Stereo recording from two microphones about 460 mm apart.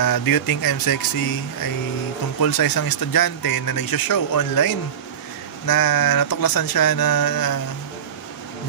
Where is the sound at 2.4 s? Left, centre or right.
Left.